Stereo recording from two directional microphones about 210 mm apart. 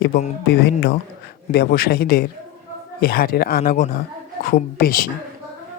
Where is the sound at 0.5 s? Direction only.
45° left (ahead or behind).